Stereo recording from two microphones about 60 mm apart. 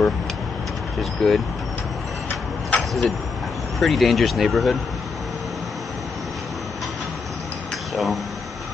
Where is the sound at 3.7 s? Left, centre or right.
Centre.